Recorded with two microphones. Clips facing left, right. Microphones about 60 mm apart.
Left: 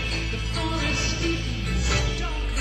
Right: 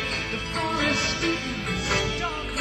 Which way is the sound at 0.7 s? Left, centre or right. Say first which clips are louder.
Right 5 dB; right.